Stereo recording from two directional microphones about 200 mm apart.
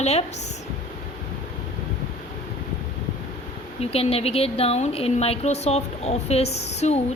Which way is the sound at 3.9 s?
30° left (ahead or behind).